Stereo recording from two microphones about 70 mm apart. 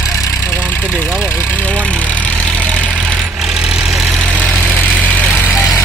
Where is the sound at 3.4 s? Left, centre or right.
Centre.